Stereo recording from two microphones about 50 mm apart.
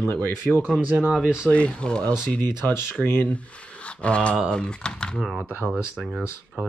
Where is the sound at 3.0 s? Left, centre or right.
Left.